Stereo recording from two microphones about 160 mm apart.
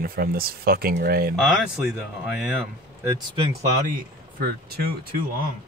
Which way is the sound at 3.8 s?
65° right (ahead or behind).